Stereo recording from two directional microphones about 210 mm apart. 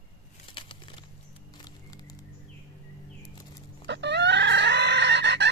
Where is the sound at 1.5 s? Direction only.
20° left (ahead or behind).